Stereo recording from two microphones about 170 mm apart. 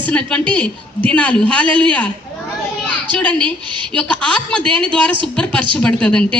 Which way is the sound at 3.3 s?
30° right (ahead or behind).